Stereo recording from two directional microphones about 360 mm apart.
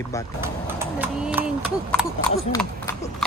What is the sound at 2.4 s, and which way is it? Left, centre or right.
Speech, centre.